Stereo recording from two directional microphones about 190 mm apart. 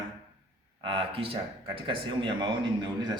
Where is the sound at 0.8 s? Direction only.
25° right (ahead or behind).